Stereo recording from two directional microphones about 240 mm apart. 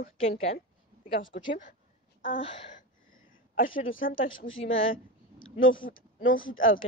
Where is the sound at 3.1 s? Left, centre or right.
Left.